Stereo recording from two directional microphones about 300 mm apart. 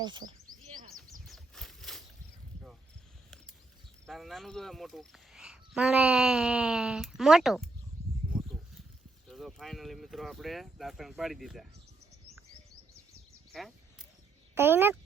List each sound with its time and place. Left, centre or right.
0.0 s speech: centre
1.2 s a sound: centre
4.0 s speech: centre
8.3 s a sound: centre
9.2 s speech: centre
13.5 s speech: centre